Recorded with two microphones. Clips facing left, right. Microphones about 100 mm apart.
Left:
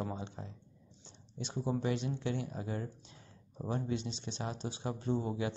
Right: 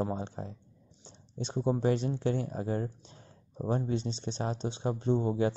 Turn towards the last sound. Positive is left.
turn(degrees=-30)  # may be behind; listen again after turning